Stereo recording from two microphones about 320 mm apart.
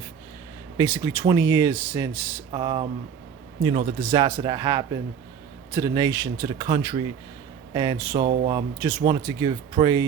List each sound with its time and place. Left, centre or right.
0.8 s speech: centre